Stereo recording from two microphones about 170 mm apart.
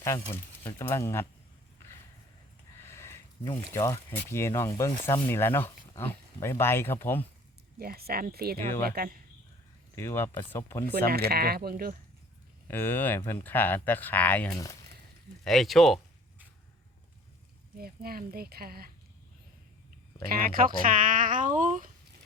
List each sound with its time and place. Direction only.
0.0 s speech: 15° left (ahead or behind)
2.8 s a sound: 15° left (ahead or behind)
3.8 s speech: 20° left (ahead or behind)
7.8 s speech: 65° right (ahead or behind)
9.9 s speech: 15° left (ahead or behind)
10.9 s speech: 65° right (ahead or behind)
12.6 s speech: 10° left (ahead or behind)
17.7 s speech: 60° right (ahead or behind)
20.3 s speech: 55° right (ahead or behind)